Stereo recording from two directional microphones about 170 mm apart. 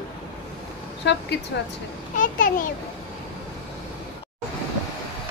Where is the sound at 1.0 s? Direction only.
90° left.